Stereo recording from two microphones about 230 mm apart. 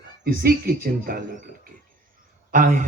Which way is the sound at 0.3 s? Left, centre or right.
Right.